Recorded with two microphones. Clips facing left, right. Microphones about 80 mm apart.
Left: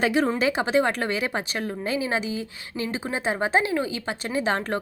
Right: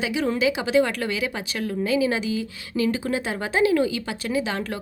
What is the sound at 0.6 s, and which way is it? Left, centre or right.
Speech, left.